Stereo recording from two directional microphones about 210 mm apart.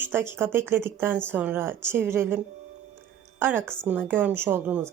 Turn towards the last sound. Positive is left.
turn(degrees=-10)  # may be behind; listen again after turning